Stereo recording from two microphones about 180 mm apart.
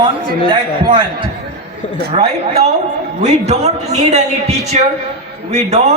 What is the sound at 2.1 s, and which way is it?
A man's voice, 35° right (ahead or behind).